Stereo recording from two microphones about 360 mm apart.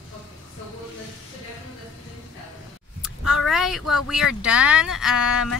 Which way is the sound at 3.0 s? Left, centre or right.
Centre.